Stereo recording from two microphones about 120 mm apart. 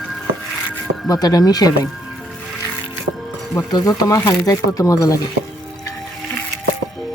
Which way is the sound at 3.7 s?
30° left (ahead or behind).